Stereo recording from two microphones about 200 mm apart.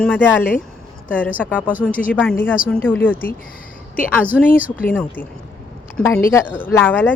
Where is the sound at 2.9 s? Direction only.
10° left (ahead or behind).